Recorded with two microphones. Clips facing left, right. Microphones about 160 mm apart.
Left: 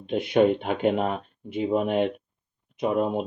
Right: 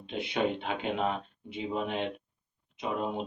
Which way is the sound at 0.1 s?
50° left (ahead or behind).